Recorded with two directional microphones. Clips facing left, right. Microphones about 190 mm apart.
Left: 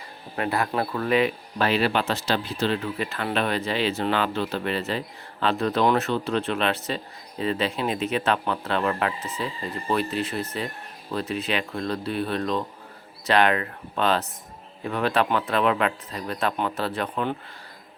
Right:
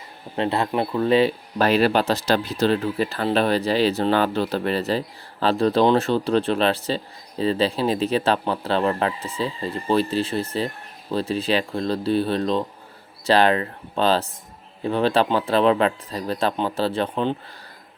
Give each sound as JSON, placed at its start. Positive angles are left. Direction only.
{"t": 0.3, "sound": "speech", "side_deg": -25}